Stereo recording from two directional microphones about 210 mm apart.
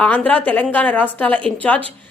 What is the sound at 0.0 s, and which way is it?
A woman's voice, 5° left (ahead or behind).